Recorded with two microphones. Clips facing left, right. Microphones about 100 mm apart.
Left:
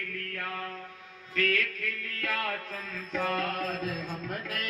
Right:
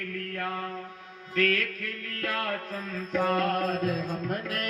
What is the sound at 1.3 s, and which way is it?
Music, 50° right (ahead or behind).